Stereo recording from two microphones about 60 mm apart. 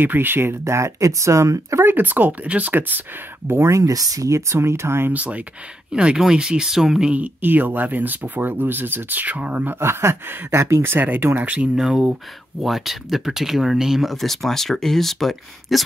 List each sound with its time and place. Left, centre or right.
0.0 s speech: right
2.0 s speech: right
3.4 s speech: right
3.7 s speech: right
5.1 s speech: right; by 7.1 s centre
7.1 s speech: right
9.8 s speech: right
11.7 s speech: centre
14.1 s speech: centre